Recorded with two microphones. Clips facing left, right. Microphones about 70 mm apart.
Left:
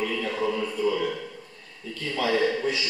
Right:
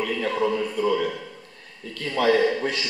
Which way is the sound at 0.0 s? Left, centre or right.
Right.